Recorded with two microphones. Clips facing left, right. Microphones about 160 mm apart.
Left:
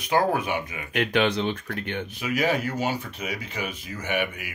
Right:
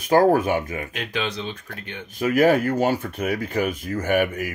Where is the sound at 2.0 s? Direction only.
45° right (ahead or behind).